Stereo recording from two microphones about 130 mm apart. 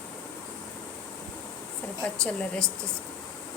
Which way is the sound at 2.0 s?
10° left (ahead or behind).